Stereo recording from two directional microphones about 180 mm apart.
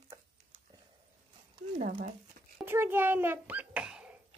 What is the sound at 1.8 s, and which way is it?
Speech, 45° right (ahead or behind).